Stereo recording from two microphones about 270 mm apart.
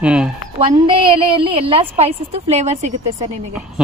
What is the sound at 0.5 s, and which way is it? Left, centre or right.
A woman's voice, centre.